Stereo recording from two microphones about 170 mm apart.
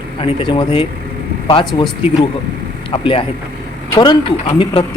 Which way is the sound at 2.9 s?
30° left (ahead or behind).